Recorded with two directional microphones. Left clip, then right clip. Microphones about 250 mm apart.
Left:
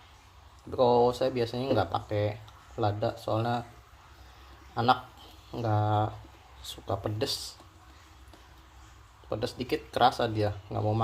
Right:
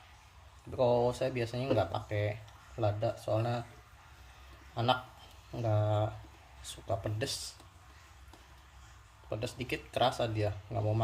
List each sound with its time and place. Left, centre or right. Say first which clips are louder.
0.8 s speech: left 5 dB; centre
4.7 s a man's voice: left 6 dB; centre
9.3 s speech: left 6 dB; centre